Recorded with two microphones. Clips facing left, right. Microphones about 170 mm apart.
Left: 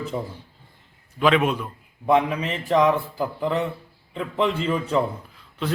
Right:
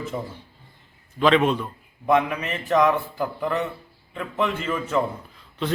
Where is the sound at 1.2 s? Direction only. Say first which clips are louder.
Right 1 dB; 5° left (ahead or behind).